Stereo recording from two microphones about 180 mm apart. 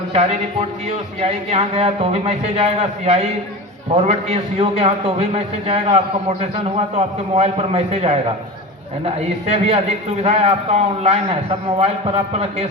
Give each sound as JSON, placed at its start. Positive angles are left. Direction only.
{"t": 1.2, "sound": "a man's voice", "side_deg": -35}